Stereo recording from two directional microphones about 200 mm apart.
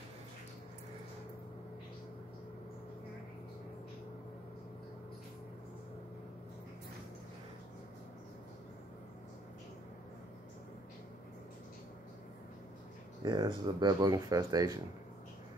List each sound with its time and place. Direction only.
13.2 s speech: 20° right (ahead or behind)